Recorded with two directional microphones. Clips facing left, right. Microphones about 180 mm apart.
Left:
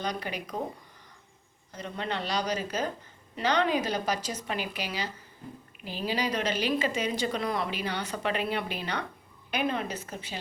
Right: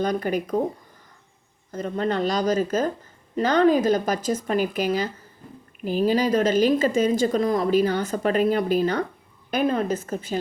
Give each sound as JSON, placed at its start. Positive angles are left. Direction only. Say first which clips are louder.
{"t": 0.0, "sound": "a woman's voice", "louder": "right 10 dB", "side_deg": -50}
{"t": 1.7, "sound": "a woman's voice", "louder": "right 9 dB", "side_deg": -45}